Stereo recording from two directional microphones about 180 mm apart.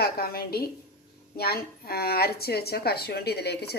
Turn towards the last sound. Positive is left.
turn(degrees=65)  # may be behind; listen again after turning